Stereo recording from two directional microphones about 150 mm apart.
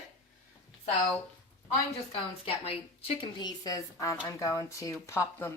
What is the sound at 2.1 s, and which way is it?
A woman's voice, 40° left (ahead or behind).